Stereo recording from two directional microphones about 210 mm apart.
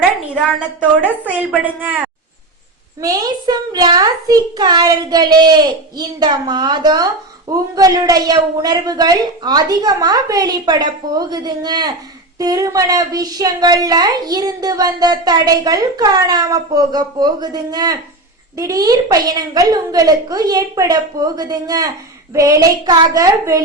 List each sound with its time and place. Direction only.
0.3 s a woman's voice: 5° right (ahead or behind)
3.0 s a child's voice: 15° right (ahead or behind)